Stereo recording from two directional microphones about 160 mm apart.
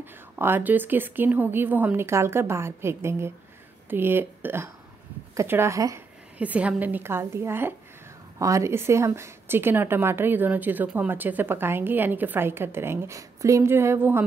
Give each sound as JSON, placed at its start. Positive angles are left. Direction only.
{"t": 0.0, "sound": "speech", "side_deg": -15}
{"t": 6.3, "sound": "speech", "side_deg": -10}